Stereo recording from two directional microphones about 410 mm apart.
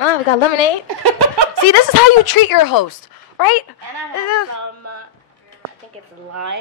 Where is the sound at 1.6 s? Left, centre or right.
Left.